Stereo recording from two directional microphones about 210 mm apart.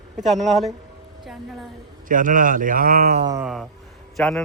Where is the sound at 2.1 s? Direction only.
40° right (ahead or behind).